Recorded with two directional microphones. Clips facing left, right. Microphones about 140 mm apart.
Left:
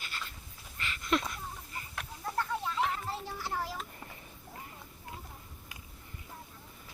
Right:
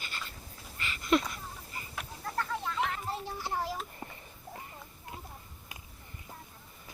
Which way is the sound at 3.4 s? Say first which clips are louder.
Right 3 dB; 20° right (ahead or behind).